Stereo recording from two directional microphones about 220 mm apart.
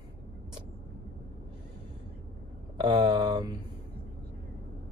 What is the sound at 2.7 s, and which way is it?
Speech, 20° right (ahead or behind).